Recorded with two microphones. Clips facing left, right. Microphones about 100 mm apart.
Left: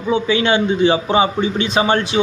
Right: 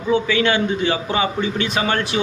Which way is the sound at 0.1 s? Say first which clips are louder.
Left 2 dB; 20° left (ahead or behind).